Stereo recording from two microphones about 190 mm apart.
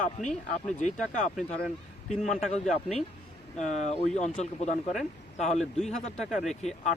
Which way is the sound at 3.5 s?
35° left (ahead or behind).